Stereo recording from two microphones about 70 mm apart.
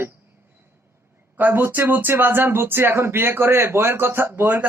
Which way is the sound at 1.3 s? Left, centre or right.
Right.